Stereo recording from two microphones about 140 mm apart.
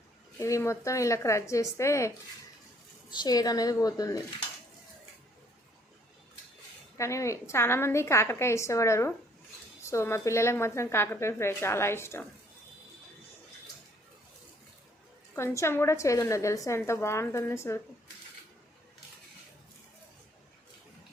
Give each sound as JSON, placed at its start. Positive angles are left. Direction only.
{"t": 0.3, "sound": "a woman's voice", "side_deg": 20}
{"t": 6.9, "sound": "a woman's voice", "side_deg": 20}
{"t": 15.4, "sound": "a woman's voice", "side_deg": 20}